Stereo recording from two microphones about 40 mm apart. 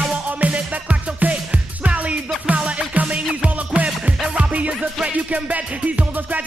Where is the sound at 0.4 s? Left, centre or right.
Right.